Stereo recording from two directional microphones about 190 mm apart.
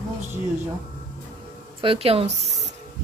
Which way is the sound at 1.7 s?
30° right (ahead or behind).